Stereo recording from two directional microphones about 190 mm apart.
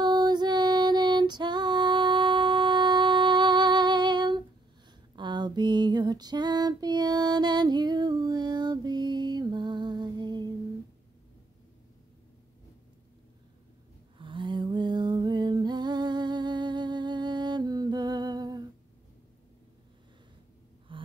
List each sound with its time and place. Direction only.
0.0 s music: 20° right (ahead or behind)
5.1 s female singing: 25° right (ahead or behind)
14.1 s a sound: 25° right (ahead or behind)
20.9 s gasp: 25° right (ahead or behind)